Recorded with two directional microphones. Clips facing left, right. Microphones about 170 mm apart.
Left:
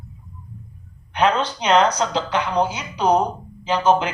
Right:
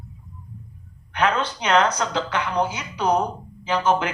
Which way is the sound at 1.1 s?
25° left (ahead or behind).